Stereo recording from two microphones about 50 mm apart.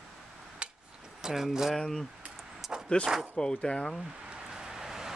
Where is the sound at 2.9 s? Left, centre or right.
Left.